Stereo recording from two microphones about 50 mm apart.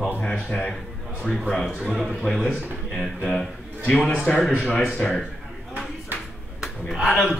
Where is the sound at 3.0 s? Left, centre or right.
Centre.